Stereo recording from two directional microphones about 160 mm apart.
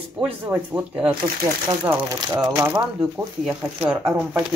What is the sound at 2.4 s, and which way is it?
Speech, 20° right (ahead or behind).